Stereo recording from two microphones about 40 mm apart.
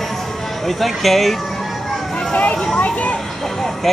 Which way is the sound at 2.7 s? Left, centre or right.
Left.